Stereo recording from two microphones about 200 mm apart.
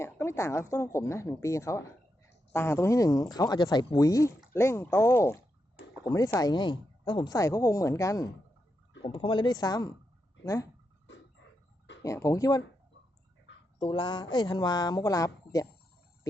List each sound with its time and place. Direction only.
0.0 s speech: 15° left (ahead or behind)
12.0 s speech: 15° left (ahead or behind)
13.7 s speech: 25° left (ahead or behind)